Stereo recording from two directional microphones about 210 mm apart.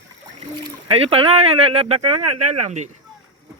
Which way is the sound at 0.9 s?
25° right (ahead or behind).